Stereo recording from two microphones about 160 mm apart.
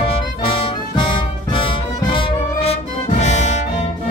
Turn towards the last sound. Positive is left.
turn(degrees=45)  # may be behind; listen again after turning